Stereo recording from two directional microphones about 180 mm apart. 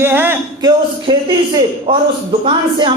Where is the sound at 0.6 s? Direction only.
25° right (ahead or behind).